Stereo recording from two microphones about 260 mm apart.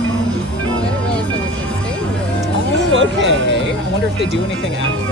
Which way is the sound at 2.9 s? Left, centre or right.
Right.